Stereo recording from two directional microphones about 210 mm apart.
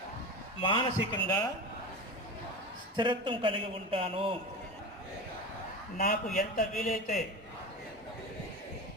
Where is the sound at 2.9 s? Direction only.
25° right (ahead or behind).